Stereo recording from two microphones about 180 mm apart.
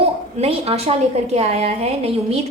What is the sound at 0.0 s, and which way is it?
A woman's voice, 35° right (ahead or behind).